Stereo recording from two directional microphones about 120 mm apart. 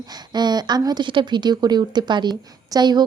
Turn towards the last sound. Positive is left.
turn(degrees=-35)  # may be behind; listen again after turning